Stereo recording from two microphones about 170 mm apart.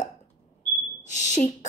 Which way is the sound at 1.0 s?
45° left (ahead or behind).